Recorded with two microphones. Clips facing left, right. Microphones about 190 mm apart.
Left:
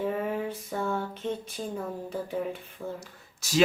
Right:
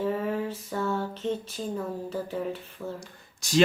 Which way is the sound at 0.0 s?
15° left (ahead or behind).